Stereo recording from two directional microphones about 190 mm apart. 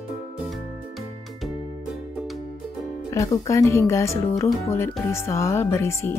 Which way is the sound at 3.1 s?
15° left (ahead or behind).